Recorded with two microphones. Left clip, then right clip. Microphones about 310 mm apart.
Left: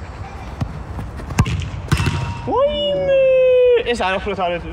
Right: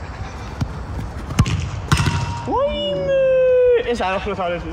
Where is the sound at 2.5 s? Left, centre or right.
Left.